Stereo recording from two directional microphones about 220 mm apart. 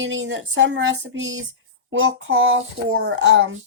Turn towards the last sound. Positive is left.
turn(degrees=-65)  # may be behind; listen again after turning